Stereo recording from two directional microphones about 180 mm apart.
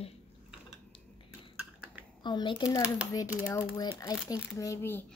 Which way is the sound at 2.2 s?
25° left (ahead or behind).